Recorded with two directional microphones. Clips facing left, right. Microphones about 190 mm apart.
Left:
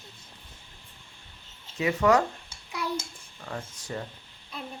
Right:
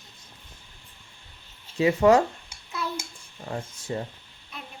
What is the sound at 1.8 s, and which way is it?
Speech, 30° right (ahead or behind).